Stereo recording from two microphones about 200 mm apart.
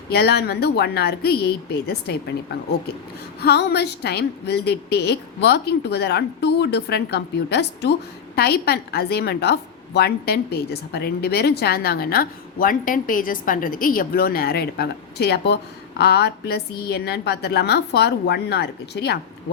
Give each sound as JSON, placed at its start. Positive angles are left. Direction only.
{"t": 0.1, "sound": "a woman's voice", "side_deg": 55}
{"t": 3.4, "sound": "a woman's voice", "side_deg": 55}